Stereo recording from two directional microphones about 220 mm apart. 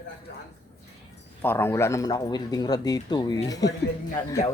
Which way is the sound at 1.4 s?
10° left (ahead or behind).